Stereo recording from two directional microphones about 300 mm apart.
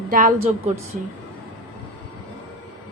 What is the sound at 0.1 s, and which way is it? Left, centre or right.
Speech, right.